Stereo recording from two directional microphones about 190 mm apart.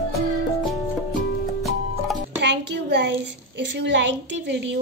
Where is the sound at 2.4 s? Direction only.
65° right (ahead or behind).